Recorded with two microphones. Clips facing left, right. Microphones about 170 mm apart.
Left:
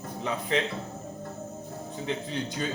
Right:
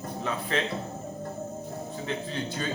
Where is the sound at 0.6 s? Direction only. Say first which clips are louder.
Left 1 dB; 15° left (ahead or behind).